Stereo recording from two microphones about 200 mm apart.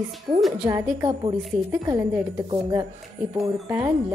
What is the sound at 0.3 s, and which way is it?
A woman's voice, 25° right (ahead or behind).